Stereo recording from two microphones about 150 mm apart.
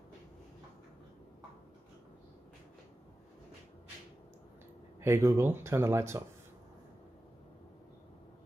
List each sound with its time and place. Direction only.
5.0 s speech: 15° right (ahead or behind)